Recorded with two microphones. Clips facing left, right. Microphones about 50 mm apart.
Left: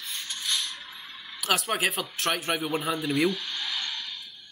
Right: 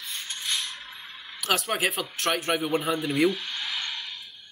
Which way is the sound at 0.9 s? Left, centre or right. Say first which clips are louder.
Right 1 dB; centre.